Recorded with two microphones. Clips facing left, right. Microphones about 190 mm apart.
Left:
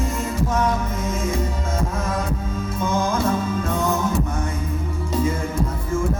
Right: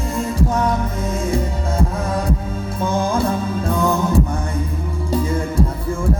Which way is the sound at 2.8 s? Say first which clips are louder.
Right 3 dB; 35° right (ahead or behind).